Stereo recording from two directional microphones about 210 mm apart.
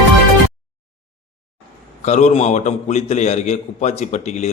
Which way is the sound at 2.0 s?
35° left (ahead or behind).